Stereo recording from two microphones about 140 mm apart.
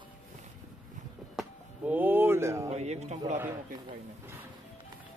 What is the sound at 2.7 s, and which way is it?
Speech, 50° right (ahead or behind).